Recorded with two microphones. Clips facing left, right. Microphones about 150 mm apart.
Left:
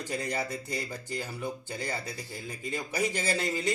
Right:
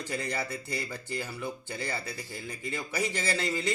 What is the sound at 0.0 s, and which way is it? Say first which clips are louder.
Speech: left 1 dB; 15° left (ahead or behind).